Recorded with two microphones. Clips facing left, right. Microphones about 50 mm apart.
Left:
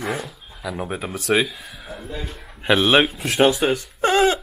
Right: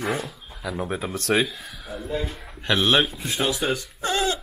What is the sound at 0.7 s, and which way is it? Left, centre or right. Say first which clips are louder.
Speech: even; centre.